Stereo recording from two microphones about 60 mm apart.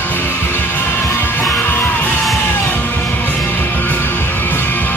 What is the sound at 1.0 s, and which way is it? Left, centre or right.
Music, left.